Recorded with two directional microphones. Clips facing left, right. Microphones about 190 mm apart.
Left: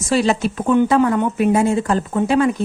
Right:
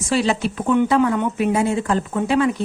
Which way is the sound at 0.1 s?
45° left (ahead or behind).